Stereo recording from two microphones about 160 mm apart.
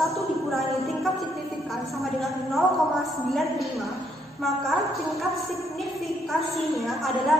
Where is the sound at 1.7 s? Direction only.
Centre (ahead or behind).